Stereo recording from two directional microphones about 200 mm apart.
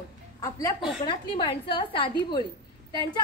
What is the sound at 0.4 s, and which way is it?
A woman's voice, 15° left (ahead or behind).